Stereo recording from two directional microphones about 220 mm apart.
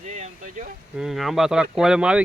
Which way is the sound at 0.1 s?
35° right (ahead or behind).